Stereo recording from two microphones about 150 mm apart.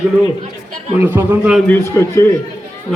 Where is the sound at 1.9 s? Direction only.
15° left (ahead or behind).